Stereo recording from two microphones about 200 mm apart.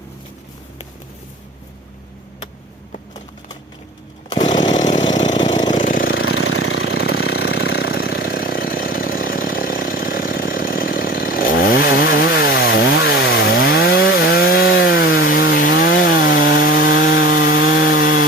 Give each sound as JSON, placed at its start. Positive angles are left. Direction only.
{"t": 4.4, "sound": "chainsaw", "side_deg": 35}
{"t": 4.7, "sound": "engine", "side_deg": 35}
{"t": 6.1, "sound": "engine", "side_deg": 85}
{"t": 7.3, "sound": "engine", "side_deg": 55}
{"t": 8.1, "sound": "a sound", "side_deg": 50}
{"t": 12.3, "sound": "chainsaw", "side_deg": 50}
{"t": 12.5, "sound": "chainsaw", "side_deg": 60}
{"t": 14.8, "sound": "wood", "side_deg": 50}
{"t": 15.3, "sound": "chainsaw", "side_deg": 45}
{"t": 17.1, "sound": "wood", "side_deg": 50}